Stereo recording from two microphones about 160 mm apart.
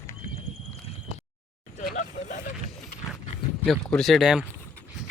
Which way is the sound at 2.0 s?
50° left (ahead or behind).